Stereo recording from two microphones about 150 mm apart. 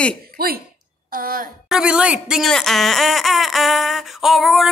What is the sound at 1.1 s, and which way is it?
Speech, 75° right (ahead or behind).